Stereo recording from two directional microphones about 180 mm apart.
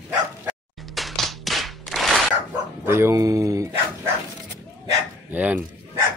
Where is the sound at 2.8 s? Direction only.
15° right (ahead or behind).